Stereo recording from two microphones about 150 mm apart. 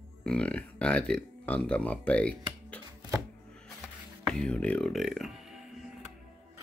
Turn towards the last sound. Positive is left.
turn(degrees=-5)  # may be behind; listen again after turning